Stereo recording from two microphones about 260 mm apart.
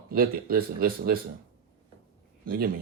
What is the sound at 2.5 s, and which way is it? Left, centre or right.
Speech, right.